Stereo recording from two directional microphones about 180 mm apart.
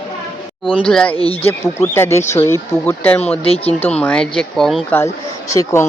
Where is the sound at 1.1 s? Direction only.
30° left (ahead or behind).